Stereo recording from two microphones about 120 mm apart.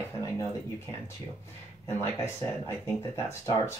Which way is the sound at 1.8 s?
20° left (ahead or behind).